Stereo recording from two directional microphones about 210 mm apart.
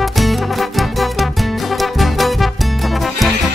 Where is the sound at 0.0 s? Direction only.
Centre (ahead or behind).